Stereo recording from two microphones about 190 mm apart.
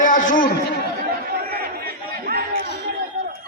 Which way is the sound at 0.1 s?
45° left (ahead or behind).